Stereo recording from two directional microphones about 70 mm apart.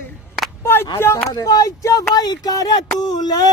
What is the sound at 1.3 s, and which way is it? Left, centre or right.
Speech, left.